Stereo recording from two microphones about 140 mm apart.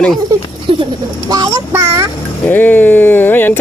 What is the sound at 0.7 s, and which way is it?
A child's voice, 40° right (ahead or behind).